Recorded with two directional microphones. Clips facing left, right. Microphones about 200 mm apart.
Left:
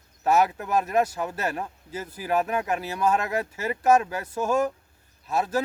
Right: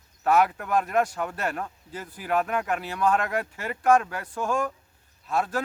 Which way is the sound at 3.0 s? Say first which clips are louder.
Even; 10° left (ahead or behind).